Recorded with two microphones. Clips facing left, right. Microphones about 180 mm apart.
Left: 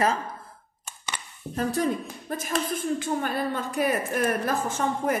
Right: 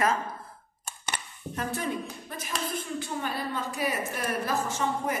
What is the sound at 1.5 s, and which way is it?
A woman's voice, 35° left (ahead or behind).